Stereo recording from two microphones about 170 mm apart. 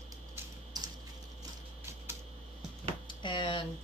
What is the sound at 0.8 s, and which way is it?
Typing, 20° right (ahead or behind).